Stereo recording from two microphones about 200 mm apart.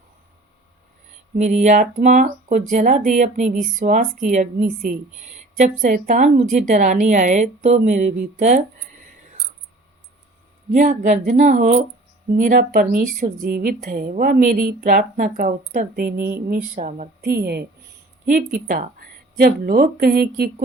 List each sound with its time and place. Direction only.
1.4 s a woman's voice: 35° right (ahead or behind)
10.7 s a woman's voice: 40° right (ahead or behind)
16.1 s speech: 10° right (ahead or behind)
16.5 s a woman's voice: 40° right (ahead or behind)